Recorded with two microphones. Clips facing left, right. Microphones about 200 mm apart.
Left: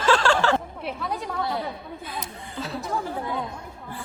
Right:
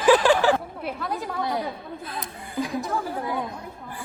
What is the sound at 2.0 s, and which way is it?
Speech, centre (ahead or behind).